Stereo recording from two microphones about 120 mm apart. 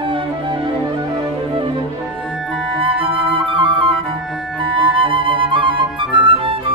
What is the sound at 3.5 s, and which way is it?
Flute, 45° right (ahead or behind).